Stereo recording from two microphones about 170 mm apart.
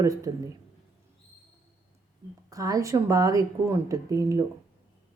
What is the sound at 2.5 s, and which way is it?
Speech, 20° right (ahead or behind).